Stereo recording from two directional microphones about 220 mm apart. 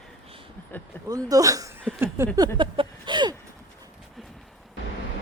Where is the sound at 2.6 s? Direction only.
20° right (ahead or behind).